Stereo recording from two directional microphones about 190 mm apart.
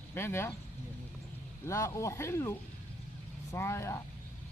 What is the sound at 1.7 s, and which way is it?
Speech, 15° left (ahead or behind).